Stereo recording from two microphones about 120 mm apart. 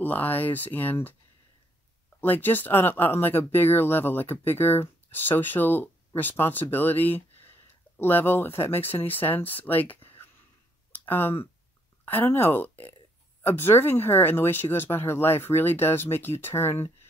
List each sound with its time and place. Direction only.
0.0 s speech: 15° left (ahead or behind)
2.1 s speech: 15° left (ahead or behind)
10.9 s a sound: 15° left (ahead or behind)
12.1 s speech: 15° left (ahead or behind)